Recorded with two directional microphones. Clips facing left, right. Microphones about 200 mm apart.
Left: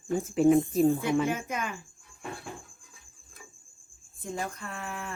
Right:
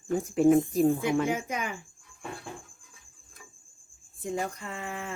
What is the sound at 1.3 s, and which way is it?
Speech, 15° right (ahead or behind).